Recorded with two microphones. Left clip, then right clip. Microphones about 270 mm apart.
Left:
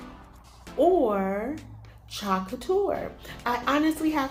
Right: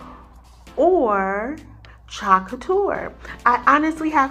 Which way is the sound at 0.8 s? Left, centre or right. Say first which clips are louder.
Right 5 dB; right.